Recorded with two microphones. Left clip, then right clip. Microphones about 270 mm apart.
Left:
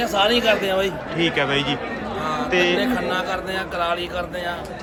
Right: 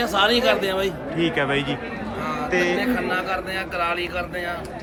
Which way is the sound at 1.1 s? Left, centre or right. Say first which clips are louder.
Left 2 dB; centre.